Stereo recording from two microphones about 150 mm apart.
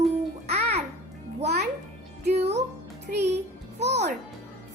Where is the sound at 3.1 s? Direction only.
70° right (ahead or behind).